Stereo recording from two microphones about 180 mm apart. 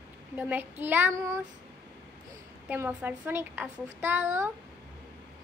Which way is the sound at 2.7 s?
10° right (ahead or behind).